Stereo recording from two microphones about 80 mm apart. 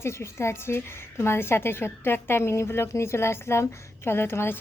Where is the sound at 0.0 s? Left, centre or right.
Left.